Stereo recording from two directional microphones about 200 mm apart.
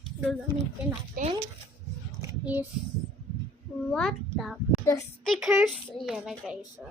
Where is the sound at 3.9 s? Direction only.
Centre (ahead or behind).